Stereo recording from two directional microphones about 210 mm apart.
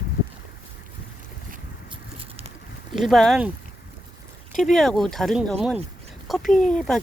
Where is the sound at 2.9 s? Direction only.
Centre (ahead or behind).